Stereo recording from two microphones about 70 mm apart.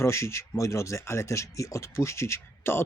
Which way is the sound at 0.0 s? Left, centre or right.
Left.